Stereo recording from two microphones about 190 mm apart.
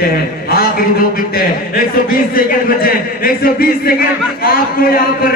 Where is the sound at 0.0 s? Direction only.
50° left (ahead or behind).